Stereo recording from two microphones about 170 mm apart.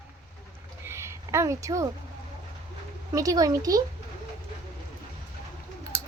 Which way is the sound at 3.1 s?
20° right (ahead or behind).